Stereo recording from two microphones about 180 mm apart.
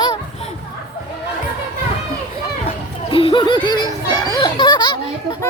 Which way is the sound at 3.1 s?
30° left (ahead or behind).